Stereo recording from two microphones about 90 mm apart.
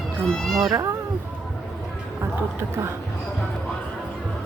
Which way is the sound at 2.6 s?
30° right (ahead or behind).